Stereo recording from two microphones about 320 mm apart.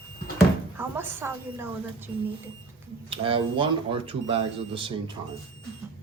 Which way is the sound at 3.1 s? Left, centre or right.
Centre.